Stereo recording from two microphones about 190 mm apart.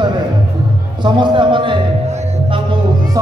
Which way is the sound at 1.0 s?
25° right (ahead or behind).